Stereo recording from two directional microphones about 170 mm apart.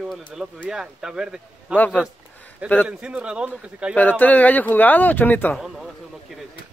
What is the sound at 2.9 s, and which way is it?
Speech, 5° right (ahead or behind).